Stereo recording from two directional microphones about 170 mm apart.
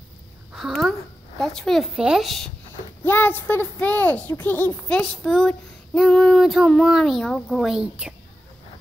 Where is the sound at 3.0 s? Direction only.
10° left (ahead or behind); by 8.1 s 5° right (ahead or behind).